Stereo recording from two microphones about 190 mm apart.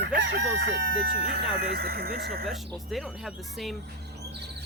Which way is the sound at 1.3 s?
55° right (ahead or behind).